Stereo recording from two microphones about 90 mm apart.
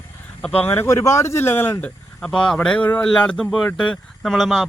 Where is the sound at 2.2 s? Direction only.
10° left (ahead or behind).